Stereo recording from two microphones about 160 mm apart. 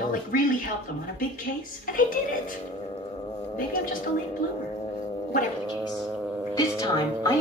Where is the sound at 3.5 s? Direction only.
60° left (ahead or behind).